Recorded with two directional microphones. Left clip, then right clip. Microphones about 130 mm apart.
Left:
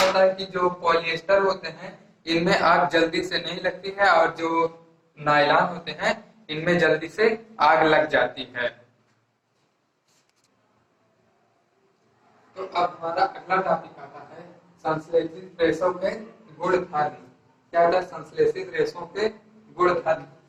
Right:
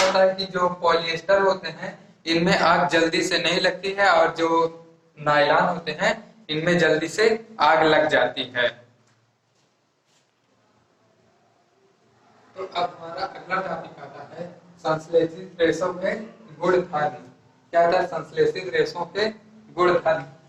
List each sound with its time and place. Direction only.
0.0 s speech: 35° right (ahead or behind)
12.3 s a man's voice: 35° right (ahead or behind)